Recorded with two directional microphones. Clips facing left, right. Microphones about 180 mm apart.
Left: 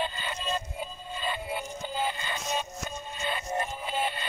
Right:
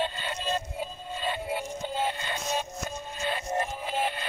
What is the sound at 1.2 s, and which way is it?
Synthetic singing, 70° right (ahead or behind).